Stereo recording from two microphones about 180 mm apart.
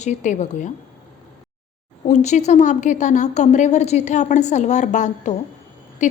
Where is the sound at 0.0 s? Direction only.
40° left (ahead or behind).